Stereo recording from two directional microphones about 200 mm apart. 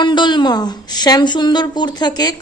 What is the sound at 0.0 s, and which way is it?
Speech, 25° left (ahead or behind).